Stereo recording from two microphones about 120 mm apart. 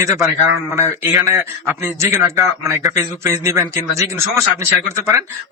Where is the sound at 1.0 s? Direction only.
10° right (ahead or behind).